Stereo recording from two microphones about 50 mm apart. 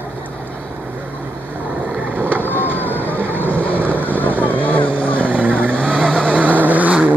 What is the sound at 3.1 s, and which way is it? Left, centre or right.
Vehicle, right.